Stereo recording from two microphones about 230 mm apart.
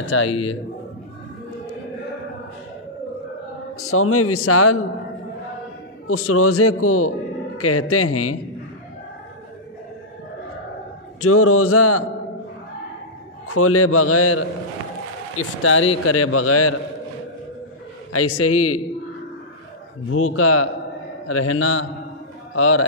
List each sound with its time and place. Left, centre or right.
0.0 s a man's voice: left
0.3 s speech: left
3.7 s a man's voice: left
6.0 s a man's voice: left
11.1 s a man's voice: left
13.5 s a man's voice: left
15.3 s a man's voice: left
16.1 s a man's voice: left
18.1 s a man's voice: left
20.1 s a man's voice: left